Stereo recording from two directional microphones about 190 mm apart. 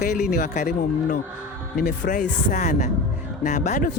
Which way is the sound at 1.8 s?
45° left (ahead or behind).